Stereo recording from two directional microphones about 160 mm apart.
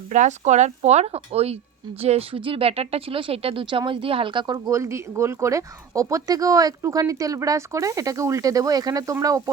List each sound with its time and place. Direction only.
0.1 s speech: 50° right (ahead or behind); by 9.4 s 20° right (ahead or behind)